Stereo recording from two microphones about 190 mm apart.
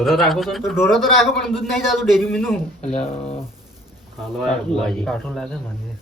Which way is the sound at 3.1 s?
30° left (ahead or behind).